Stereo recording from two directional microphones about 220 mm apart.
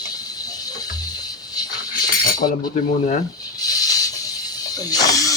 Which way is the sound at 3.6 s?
15° left (ahead or behind).